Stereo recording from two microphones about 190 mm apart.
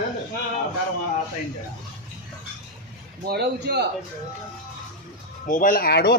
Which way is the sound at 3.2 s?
60° right (ahead or behind).